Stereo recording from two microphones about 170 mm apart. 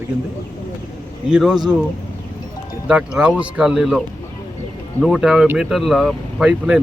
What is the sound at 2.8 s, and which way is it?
Speech, 5° right (ahead or behind).